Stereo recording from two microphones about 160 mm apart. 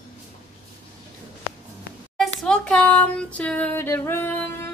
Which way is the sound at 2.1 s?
5° left (ahead or behind).